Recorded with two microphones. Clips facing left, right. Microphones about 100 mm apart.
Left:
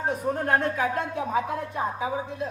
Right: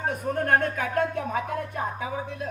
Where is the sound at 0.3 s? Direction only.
55° right (ahead or behind).